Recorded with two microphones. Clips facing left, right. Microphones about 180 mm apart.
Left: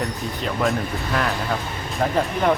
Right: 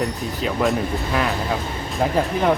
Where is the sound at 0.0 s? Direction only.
Centre (ahead or behind).